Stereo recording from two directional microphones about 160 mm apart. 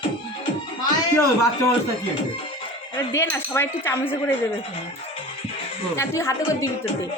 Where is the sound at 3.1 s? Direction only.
15° left (ahead or behind).